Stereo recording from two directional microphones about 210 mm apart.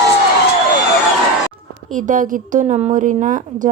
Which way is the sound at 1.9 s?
35° right (ahead or behind).